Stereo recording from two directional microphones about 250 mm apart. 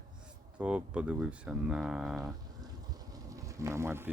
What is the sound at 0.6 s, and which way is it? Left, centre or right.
Speech, centre.